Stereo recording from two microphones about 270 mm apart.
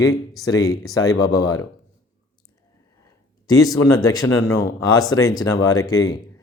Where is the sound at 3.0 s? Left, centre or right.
Centre.